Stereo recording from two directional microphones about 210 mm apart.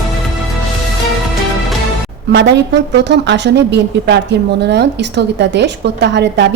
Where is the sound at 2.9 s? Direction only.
55° right (ahead or behind).